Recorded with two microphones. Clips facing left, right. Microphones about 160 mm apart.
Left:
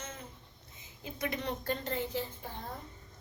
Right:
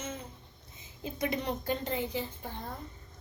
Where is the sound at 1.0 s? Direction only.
25° right (ahead or behind).